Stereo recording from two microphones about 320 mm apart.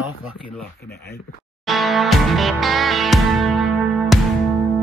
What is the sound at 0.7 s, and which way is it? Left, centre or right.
Speech, left.